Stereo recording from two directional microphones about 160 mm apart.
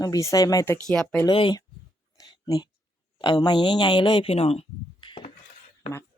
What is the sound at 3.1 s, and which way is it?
Speech, 25° left (ahead or behind).